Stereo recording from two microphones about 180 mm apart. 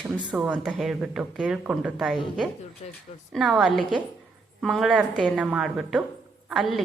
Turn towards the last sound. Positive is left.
turn(degrees=0)  # may be behind; listen again after turning